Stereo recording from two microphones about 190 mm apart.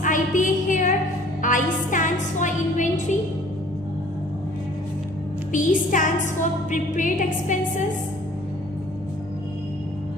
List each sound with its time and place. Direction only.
0.0 s a sound: 45° left (ahead or behind)
1.4 s music: 45° left (ahead or behind)
5.5 s music: 40° left (ahead or behind)